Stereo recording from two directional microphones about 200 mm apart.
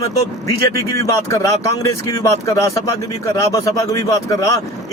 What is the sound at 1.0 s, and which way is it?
Speech, 15° left (ahead or behind).